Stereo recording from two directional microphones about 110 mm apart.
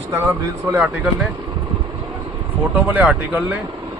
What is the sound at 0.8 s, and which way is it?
Speech, 5° right (ahead or behind).